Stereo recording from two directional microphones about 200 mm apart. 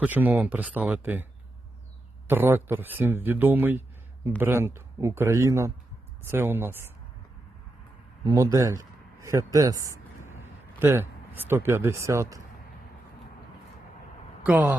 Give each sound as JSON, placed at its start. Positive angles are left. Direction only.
{"t": 0.0, "sound": "speech", "side_deg": -10}
{"t": 8.2, "sound": "speech", "side_deg": -20}
{"t": 14.4, "sound": "speech", "side_deg": -5}